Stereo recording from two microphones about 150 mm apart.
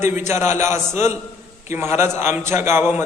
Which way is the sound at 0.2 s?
15° right (ahead or behind).